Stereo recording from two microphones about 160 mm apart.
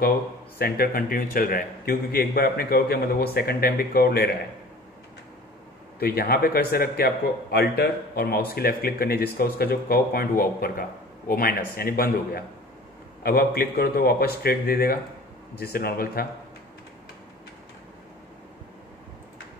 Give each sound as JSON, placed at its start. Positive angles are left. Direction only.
{"t": 0.6, "sound": "a man's voice", "side_deg": 70}
{"t": 5.9, "sound": "a man's voice", "side_deg": 70}